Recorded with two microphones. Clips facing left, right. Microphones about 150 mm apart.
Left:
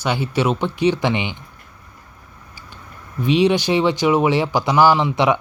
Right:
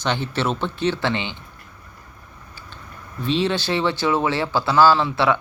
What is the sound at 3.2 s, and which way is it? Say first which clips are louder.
Speech: left 6 dB; 15° left (ahead or behind).